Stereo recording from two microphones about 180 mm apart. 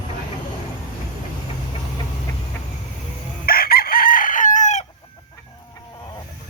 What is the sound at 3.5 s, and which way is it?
Chicken, 55° left (ahead or behind).